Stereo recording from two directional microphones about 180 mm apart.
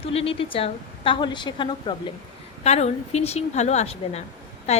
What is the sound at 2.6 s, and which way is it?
A woman's voice, 40° left (ahead or behind).